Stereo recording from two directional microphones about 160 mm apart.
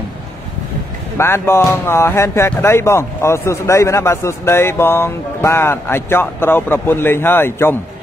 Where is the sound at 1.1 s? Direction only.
15° left (ahead or behind).